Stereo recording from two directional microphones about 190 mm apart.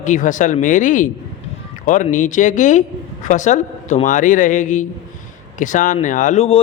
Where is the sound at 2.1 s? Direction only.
40° left (ahead or behind).